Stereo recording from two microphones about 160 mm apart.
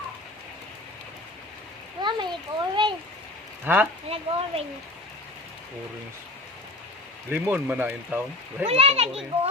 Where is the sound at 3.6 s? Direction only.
10° right (ahead or behind).